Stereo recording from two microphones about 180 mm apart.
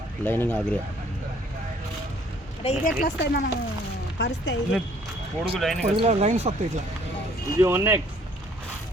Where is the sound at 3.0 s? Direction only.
65° left (ahead or behind).